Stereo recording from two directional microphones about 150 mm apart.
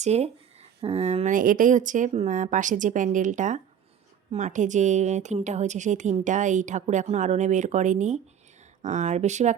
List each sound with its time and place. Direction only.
0.0 s a woman's voice: 45° right (ahead or behind)